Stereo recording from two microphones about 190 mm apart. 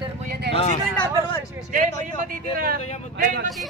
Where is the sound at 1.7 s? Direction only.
45° right (ahead or behind).